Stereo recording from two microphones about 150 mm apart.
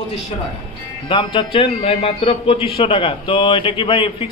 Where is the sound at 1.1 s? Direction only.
35° left (ahead or behind).